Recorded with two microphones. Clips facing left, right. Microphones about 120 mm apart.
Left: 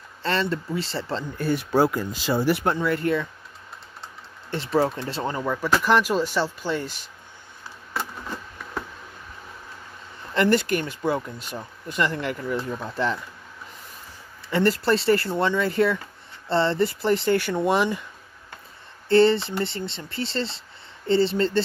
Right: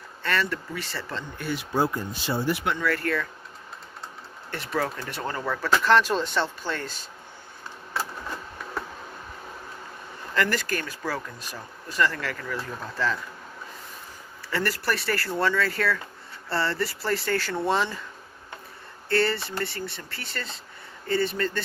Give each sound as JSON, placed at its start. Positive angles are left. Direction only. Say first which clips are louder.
{"t": 0.2, "sound": "speech", "louder": "left 3 dB", "side_deg": 25}
{"t": 1.7, "sound": "speech", "louder": "left 4 dB", "side_deg": 85}
{"t": 2.8, "sound": "speech", "louder": "left 3 dB", "side_deg": 20}
{"t": 4.5, "sound": "speech", "louder": "left 6 dB", "side_deg": 25}
{"t": 10.3, "sound": "speech", "louder": "left 6 dB", "side_deg": 25}
{"t": 14.5, "sound": "speech", "louder": "left 7 dB", "side_deg": 25}
{"t": 19.0, "sound": "speech", "louder": "left 8 dB", "side_deg": 20}